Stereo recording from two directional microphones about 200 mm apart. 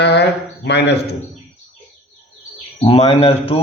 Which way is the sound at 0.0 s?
55° left (ahead or behind).